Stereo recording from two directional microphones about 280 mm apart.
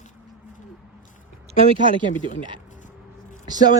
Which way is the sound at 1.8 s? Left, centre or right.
Centre.